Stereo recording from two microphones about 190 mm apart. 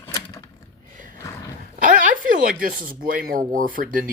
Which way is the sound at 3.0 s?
50° right (ahead or behind).